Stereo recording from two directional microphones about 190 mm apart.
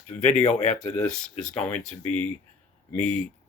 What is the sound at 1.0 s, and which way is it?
Speech, 5° left (ahead or behind).